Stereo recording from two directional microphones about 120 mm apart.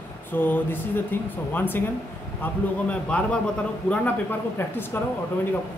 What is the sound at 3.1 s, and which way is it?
Speech, 10° left (ahead or behind).